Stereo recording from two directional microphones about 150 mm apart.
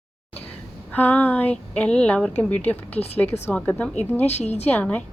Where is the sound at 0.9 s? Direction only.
10° left (ahead or behind).